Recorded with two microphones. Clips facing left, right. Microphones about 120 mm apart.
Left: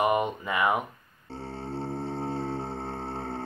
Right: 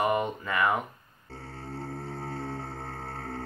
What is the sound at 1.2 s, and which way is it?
Music, 30° left (ahead or behind).